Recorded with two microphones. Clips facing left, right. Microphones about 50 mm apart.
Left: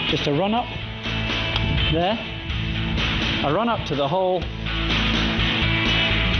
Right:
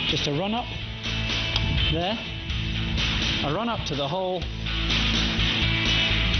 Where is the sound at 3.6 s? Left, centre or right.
Centre.